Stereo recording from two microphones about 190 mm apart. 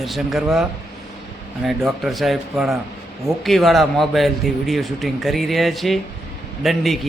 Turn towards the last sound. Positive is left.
turn(degrees=0)  # may be behind; listen again after turning